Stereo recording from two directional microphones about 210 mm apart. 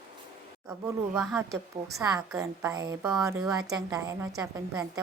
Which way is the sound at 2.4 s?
15° right (ahead or behind).